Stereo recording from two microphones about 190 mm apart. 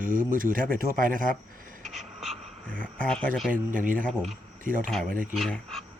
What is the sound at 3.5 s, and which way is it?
Speech, 45° right (ahead or behind).